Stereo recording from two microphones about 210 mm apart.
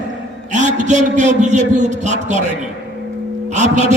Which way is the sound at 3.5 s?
35° right (ahead or behind).